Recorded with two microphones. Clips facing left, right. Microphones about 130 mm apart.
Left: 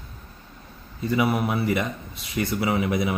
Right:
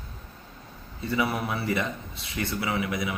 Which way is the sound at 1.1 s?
20° left (ahead or behind).